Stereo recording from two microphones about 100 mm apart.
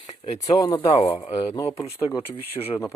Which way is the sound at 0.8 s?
65° left (ahead or behind).